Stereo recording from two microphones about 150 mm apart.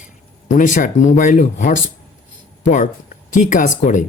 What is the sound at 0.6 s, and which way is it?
Speech, 60° left (ahead or behind).